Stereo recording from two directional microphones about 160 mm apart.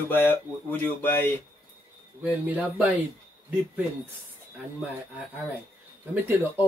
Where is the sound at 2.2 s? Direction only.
10° right (ahead or behind).